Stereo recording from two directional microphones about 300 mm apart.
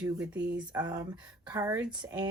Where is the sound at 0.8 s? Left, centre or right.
Centre.